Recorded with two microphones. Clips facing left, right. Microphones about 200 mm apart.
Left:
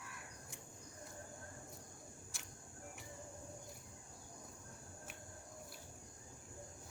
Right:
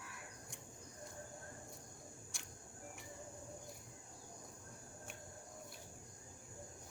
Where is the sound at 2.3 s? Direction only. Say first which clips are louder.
Even; centre (ahead or behind).